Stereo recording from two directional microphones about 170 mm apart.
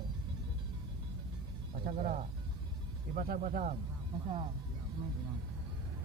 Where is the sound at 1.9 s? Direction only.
50° right (ahead or behind).